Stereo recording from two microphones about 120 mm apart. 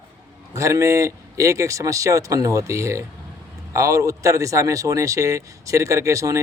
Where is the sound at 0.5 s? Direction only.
25° right (ahead or behind).